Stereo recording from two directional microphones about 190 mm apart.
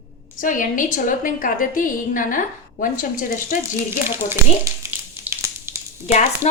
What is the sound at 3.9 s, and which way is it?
Speech, 10° right (ahead or behind).